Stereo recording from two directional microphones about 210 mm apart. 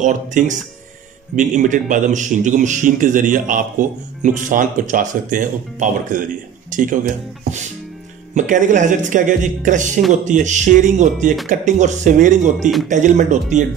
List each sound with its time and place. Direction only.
0.0 s a man's voice: 35° right (ahead or behind)
8.4 s a man's voice: 35° right (ahead or behind)
12.5 s speech: centre (ahead or behind)
12.8 s a man's voice: 35° right (ahead or behind)